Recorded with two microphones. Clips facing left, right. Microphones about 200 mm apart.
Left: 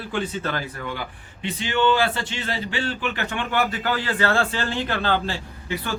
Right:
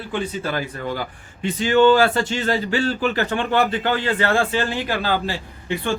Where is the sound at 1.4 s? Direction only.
45° right (ahead or behind); by 5.3 s 10° right (ahead or behind).